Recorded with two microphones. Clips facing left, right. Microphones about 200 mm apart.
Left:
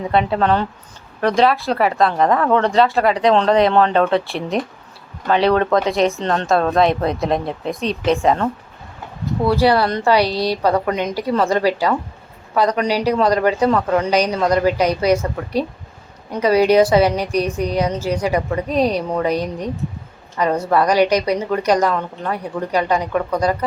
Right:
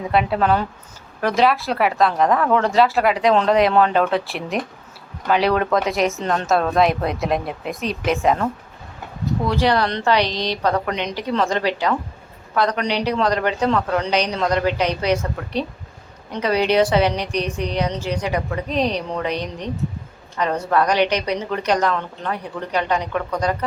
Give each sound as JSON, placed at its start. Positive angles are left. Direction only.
{"t": 0.3, "sound": "speech", "side_deg": -5}
{"t": 9.5, "sound": "a woman's voice", "side_deg": 10}
{"t": 10.9, "sound": "a woman's voice", "side_deg": 45}
{"t": 11.2, "sound": "a woman's voice", "side_deg": 10}